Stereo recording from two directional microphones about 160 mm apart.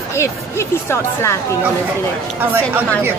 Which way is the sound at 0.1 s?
15° left (ahead or behind).